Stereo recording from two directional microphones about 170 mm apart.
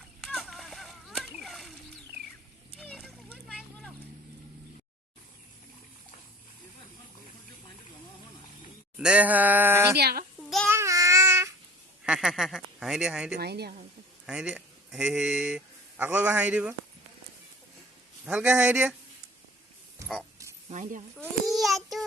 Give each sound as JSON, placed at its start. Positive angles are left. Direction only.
{"t": 0.2, "sound": "a sound", "side_deg": 0}
{"t": 2.7, "sound": "a sound", "side_deg": 0}
{"t": 9.0, "sound": "a sound", "side_deg": -5}
{"t": 10.0, "sound": "a child's voice", "side_deg": -65}
{"t": 10.4, "sound": "child singing", "side_deg": 0}
{"t": 10.7, "sound": "child singing", "side_deg": -15}
{"t": 12.0, "sound": "speech", "side_deg": -5}
{"t": 13.3, "sound": "a woman's voice", "side_deg": -75}
{"t": 14.3, "sound": "speech", "side_deg": -5}
{"t": 18.3, "sound": "speech", "side_deg": -10}
{"t": 20.7, "sound": "speech", "side_deg": -45}
{"t": 21.4, "sound": "a sound", "side_deg": 0}